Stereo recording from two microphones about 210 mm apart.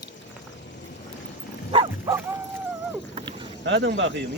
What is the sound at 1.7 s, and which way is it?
Dog, 25° right (ahead or behind).